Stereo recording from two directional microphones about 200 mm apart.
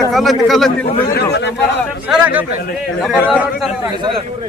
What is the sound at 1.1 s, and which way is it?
Speech, 55° left (ahead or behind).